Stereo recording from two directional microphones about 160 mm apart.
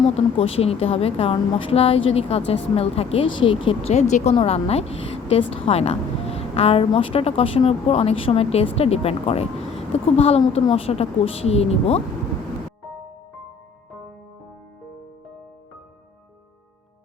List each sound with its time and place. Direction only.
0.1 s a woman's voice: 40° left (ahead or behind)
3.9 s a woman's voice: 45° left (ahead or behind)